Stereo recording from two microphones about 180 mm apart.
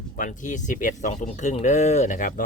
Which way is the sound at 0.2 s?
45° left (ahead or behind).